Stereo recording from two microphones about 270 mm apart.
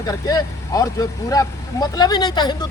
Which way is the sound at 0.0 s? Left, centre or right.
Centre.